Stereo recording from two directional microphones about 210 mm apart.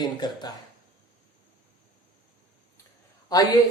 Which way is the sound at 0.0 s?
20° left (ahead or behind).